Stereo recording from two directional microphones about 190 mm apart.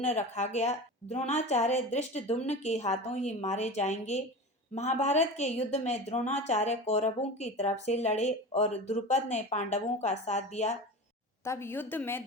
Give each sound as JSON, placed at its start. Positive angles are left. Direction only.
{"t": 0.0, "sound": "a woman's voice", "side_deg": 35}
{"t": 11.4, "sound": "a woman's voice", "side_deg": 15}